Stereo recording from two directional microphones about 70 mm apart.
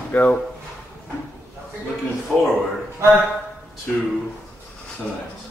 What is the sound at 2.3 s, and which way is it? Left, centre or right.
Speech, centre.